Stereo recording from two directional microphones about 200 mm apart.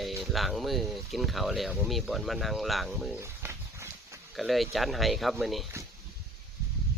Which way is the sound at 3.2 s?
10° right (ahead or behind).